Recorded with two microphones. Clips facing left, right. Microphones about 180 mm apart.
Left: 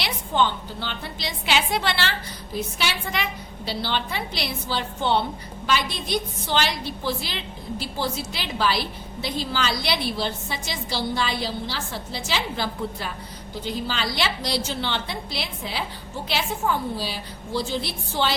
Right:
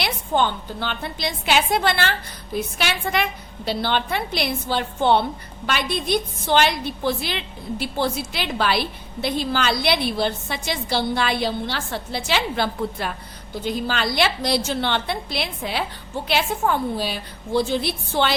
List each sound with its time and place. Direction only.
0.0 s a woman's voice: 50° right (ahead or behind)